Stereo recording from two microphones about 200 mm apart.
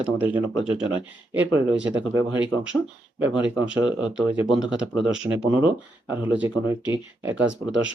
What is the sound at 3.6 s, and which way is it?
Speech, 5° right (ahead or behind).